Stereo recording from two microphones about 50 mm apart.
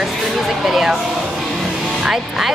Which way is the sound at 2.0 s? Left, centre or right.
Centre.